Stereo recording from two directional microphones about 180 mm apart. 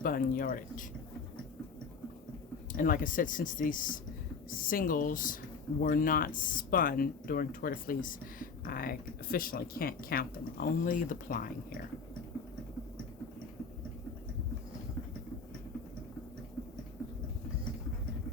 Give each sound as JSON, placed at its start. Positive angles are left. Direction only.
{"t": 0.0, "sound": "speech", "side_deg": 50}
{"t": 2.7, "sound": "speech", "side_deg": 50}